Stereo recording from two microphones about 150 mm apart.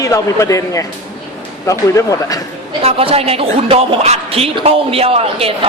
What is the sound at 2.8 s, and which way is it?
Speech, 40° right (ahead or behind).